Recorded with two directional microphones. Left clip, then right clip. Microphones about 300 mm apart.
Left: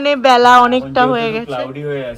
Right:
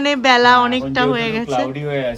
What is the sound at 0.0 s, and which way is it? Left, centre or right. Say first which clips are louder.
Speech: left 3 dB; centre.